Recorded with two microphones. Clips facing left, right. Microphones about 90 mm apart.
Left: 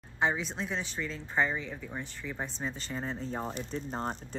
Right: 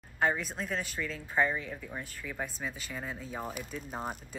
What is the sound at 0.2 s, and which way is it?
Speech, 5° right (ahead or behind).